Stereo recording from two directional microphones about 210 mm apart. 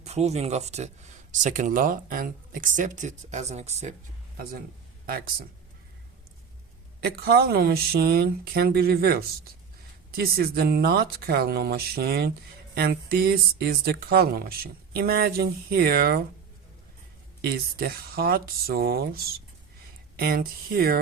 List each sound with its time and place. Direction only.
0.0 s speech: 30° right (ahead or behind)
7.0 s speech: 50° right (ahead or behind)
17.4 s speech: 45° right (ahead or behind)